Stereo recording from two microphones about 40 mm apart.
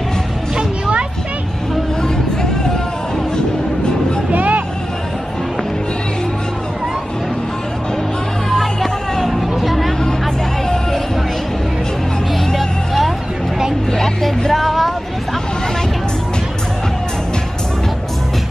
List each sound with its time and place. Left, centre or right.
0.6 s music: right
4.3 s vehicle: right
8.5 s music: centre
9.6 s music: centre
12.5 s vehicle: centre